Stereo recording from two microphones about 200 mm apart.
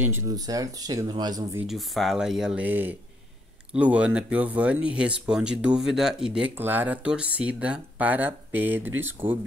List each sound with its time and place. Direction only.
0.0 s speech: 15° right (ahead or behind)
1.7 s speech: centre (ahead or behind)